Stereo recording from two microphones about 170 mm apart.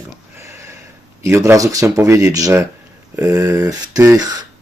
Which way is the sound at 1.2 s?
15° right (ahead or behind).